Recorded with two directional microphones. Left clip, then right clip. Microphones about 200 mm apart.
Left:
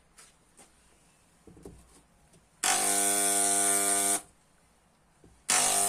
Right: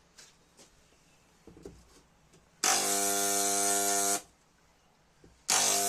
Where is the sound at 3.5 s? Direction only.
30° left (ahead or behind).